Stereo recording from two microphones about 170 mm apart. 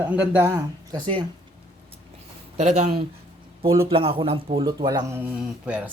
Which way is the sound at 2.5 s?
40° right (ahead or behind).